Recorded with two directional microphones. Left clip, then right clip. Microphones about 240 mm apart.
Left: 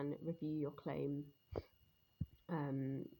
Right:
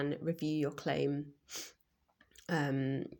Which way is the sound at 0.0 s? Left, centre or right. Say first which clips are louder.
Right 8 dB; centre.